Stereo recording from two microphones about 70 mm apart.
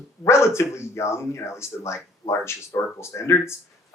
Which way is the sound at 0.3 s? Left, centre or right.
Left.